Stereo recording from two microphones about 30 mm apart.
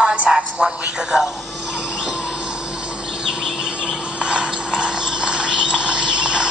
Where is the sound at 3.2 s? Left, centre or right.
Right.